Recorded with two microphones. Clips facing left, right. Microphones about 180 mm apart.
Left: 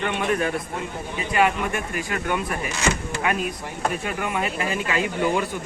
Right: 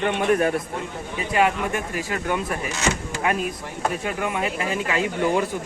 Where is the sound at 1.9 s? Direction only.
30° right (ahead or behind).